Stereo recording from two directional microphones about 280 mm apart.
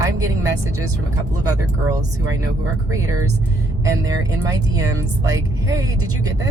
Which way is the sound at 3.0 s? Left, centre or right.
Right.